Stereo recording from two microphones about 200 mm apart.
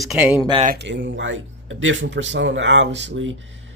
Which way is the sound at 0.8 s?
60° right (ahead or behind).